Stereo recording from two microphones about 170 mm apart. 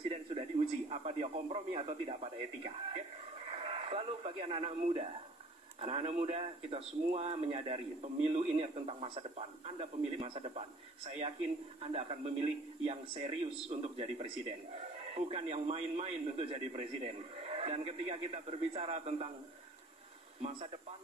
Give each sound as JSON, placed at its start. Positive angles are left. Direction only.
{"t": 0.1, "sound": "a man's voice", "side_deg": -35}
{"t": 3.5, "sound": "radio", "side_deg": -35}
{"t": 5.8, "sound": "a man's voice", "side_deg": -35}
{"t": 11.8, "sound": "a man's voice", "side_deg": -35}